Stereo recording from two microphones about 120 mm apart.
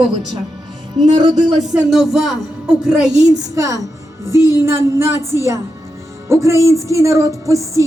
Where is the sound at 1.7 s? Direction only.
5° right (ahead or behind).